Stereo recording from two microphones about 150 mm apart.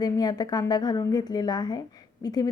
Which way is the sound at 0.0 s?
25° left (ahead or behind).